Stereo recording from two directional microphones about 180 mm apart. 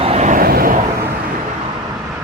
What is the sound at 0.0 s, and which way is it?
Vehicle, 35° right (ahead or behind).